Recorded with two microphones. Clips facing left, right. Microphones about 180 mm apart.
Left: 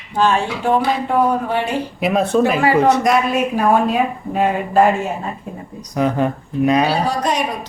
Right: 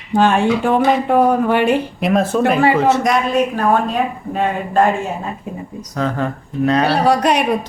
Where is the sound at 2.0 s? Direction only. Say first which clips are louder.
Left 4 dB; centre (ahead or behind).